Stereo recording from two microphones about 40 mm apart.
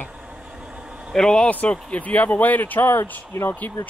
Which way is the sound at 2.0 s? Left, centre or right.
Left.